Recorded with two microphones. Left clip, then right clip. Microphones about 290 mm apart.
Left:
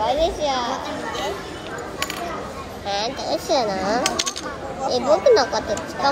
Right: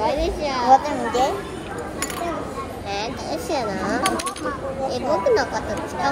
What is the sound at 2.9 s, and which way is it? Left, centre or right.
Speech, centre.